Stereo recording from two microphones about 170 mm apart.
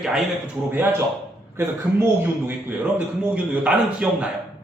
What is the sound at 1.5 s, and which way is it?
A man's voice, 15° right (ahead or behind).